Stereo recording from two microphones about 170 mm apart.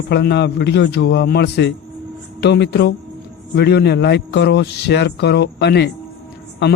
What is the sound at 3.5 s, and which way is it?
A man's voice, 80° left.